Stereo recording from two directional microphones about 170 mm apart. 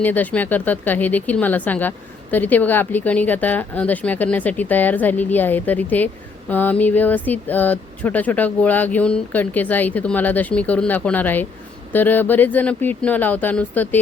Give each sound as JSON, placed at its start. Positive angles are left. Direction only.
{"t": 0.0, "sound": "speech", "side_deg": 10}